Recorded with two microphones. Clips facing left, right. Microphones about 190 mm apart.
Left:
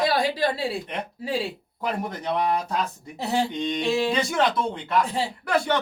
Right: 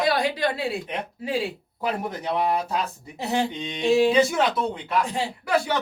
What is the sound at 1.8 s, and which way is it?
Speech, 5° right (ahead or behind).